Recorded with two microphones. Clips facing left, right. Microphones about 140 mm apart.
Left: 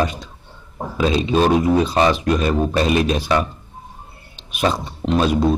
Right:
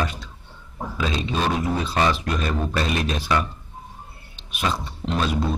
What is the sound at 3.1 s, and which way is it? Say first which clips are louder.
Speech: left 4 dB; 25° left (ahead or behind).